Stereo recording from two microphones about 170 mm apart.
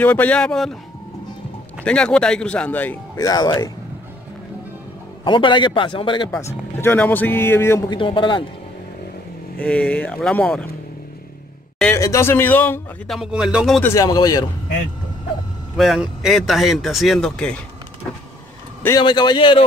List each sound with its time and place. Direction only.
0.0 s speech: 10° left (ahead or behind)
1.9 s speech: 5° left (ahead or behind)
3.3 s a man's voice: 25° left (ahead or behind)
5.2 s a man's voice: 30° left (ahead or behind)
6.3 s speech: 15° left (ahead or behind)
7.9 s a man's voice: 30° left (ahead or behind)
9.6 s speech: 5° left (ahead or behind)
12.0 s speech: 15° left (ahead or behind)
13.1 s speech: 5° right (ahead or behind)
13.8 s a man's voice: 20° left (ahead or behind)
15.7 s speech: centre (ahead or behind)
18.9 s a man's voice: 25° left (ahead or behind)